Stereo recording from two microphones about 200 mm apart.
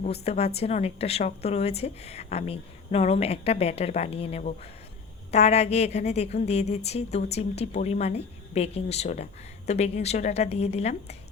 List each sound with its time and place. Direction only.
0.0 s a woman's voice: 30° left (ahead or behind)